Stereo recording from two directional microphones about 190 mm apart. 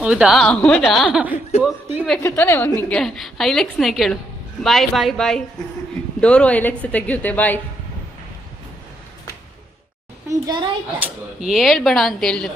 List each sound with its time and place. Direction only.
0.0 s a woman's voice: 5° right (ahead or behind)
2.2 s a woman's voice: 10° left (ahead or behind)
10.2 s a child's voice: 20° right (ahead or behind)
11.3 s a woman's voice: centre (ahead or behind)